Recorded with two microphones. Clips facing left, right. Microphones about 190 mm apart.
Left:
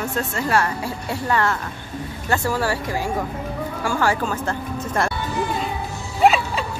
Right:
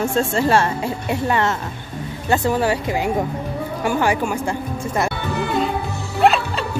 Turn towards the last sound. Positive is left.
turn(degrees=0)  # may be behind; listen again after turning